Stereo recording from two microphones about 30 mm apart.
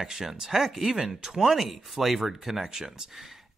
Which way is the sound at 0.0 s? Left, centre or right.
Centre.